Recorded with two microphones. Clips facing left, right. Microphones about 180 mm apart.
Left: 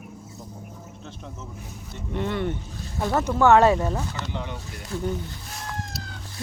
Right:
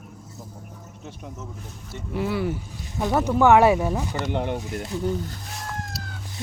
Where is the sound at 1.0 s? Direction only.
10° right (ahead or behind).